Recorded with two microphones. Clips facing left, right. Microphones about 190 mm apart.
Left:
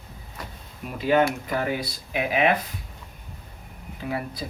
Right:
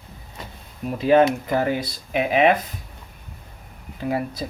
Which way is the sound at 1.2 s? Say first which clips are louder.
Right 5 dB; 25° right (ahead or behind).